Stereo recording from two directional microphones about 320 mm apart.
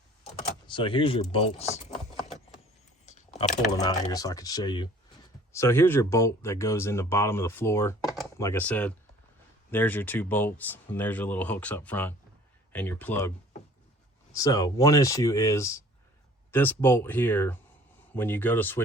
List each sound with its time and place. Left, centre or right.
0.7 s speech: centre
3.1 s typing: left
3.7 s speech: centre
14.3 s speech: centre